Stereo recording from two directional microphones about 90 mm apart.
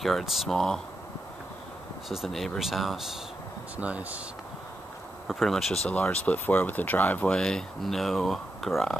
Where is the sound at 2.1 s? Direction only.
Centre (ahead or behind).